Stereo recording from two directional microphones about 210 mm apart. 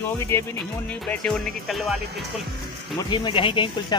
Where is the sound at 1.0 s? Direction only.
5° left (ahead or behind).